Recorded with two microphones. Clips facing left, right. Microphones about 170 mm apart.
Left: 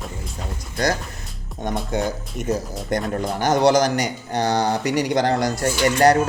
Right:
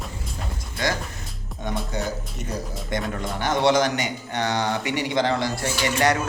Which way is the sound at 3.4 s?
40° left (ahead or behind).